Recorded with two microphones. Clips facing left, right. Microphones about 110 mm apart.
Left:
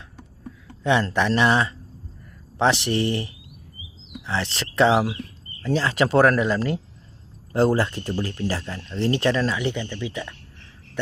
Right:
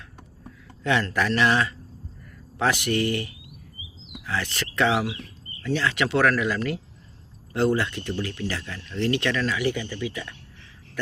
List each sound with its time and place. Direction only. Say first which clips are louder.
0.9 s speech: left 3 dB; 25° left (ahead or behind)